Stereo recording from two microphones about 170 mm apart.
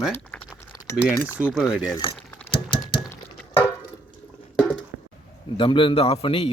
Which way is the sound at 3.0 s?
15° left (ahead or behind).